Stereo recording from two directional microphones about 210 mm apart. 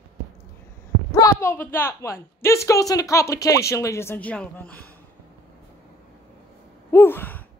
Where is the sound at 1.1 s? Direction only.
15° left (ahead or behind).